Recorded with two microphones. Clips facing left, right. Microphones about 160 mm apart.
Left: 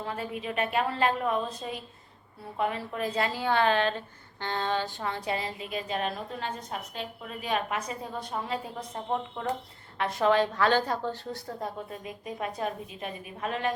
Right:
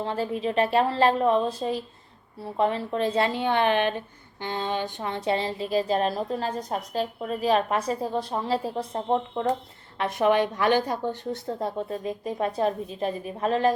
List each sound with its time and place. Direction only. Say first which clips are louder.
0.0 s a woman's voice: right 7 dB; 30° right (ahead or behind)
10.0 s a woman's voice: right 2 dB; 20° right (ahead or behind); by 13.7 s 35° right (ahead or behind)